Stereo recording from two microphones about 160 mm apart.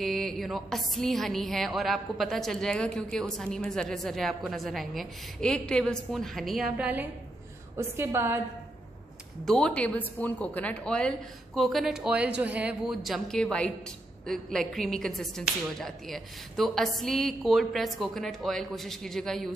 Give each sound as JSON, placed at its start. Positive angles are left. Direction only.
{"t": 0.0, "sound": "a woman's voice", "side_deg": 0}
{"t": 9.4, "sound": "speech", "side_deg": 5}